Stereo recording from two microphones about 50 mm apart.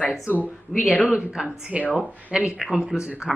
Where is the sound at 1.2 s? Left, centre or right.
Centre.